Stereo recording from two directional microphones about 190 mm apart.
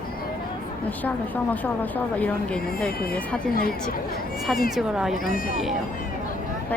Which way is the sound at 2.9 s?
50° left (ahead or behind).